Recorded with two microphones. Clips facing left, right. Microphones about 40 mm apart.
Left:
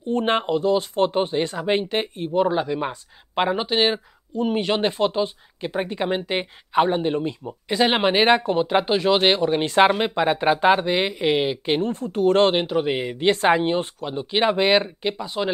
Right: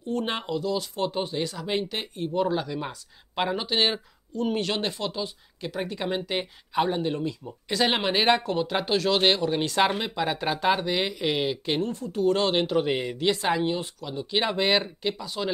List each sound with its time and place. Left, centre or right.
0.1 s speech: left
7.6 s speech: centre
11.9 s speech: left
12.5 s speech: centre
13.2 s speech: left